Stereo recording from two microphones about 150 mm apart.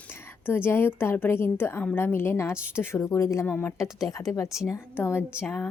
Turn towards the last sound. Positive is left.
turn(degrees=15)  # may be behind; listen again after turning